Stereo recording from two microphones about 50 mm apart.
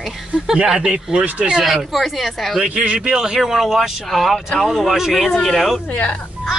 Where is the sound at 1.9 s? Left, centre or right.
Centre.